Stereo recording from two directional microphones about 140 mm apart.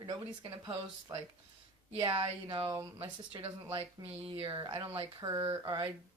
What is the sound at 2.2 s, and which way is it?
Speech, 40° right (ahead or behind).